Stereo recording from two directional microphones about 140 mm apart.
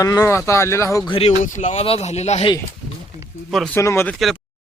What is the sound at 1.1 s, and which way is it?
Speech, 45° left (ahead or behind).